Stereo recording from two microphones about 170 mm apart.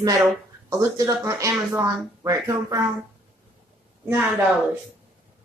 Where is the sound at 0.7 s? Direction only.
20° right (ahead or behind).